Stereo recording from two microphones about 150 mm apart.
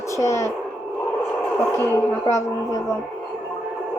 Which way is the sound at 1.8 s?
20° left (ahead or behind).